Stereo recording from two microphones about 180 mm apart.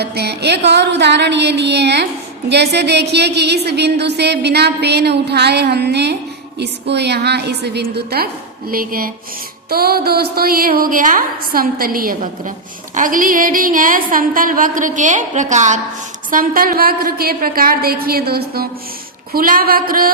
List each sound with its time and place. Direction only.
0.0 s a woman's voice: 65° right (ahead or behind)